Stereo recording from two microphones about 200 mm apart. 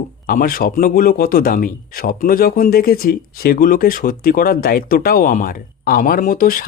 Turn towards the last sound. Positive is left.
turn(degrees=45)  # may be behind; listen again after turning